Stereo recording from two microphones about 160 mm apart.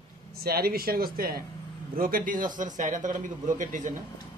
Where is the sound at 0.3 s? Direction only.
70° right (ahead or behind).